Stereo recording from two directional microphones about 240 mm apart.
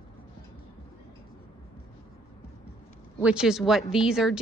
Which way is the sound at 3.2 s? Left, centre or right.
Centre.